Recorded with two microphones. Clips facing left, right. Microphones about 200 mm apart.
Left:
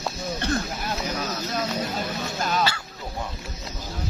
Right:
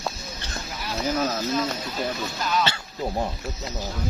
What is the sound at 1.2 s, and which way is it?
Speech, 45° right (ahead or behind).